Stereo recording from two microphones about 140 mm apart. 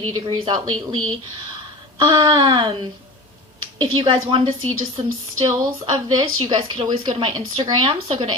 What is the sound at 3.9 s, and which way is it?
Speech, 35° right (ahead or behind).